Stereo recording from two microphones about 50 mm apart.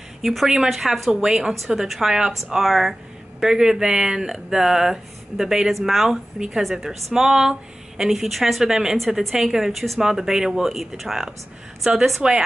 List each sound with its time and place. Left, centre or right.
0.2 s a woman's voice: centre
8.9 s a woman's voice: centre
12.2 s speech: centre